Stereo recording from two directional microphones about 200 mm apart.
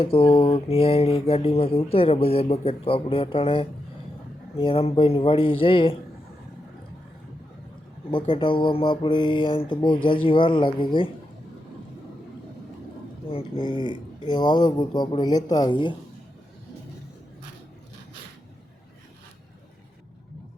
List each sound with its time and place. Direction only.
0.0 s mantra: 30° left (ahead or behind)
8.1 s mantra: 25° left (ahead or behind)
13.2 s mantra: 25° left (ahead or behind)